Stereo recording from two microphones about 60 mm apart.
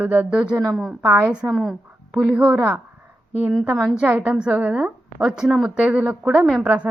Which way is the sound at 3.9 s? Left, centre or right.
Centre.